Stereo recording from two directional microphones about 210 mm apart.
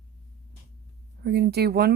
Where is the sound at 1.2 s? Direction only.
50° right (ahead or behind).